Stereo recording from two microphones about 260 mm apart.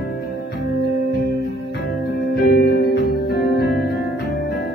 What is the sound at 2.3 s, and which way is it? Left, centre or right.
Music, left.